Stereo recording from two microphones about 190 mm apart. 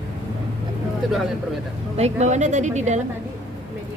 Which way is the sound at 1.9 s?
35° right (ahead or behind).